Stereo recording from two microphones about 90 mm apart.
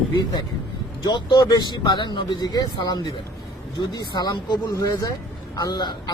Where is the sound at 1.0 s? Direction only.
55° left (ahead or behind).